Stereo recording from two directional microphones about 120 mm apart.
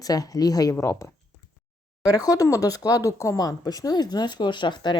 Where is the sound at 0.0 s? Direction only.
30° left (ahead or behind).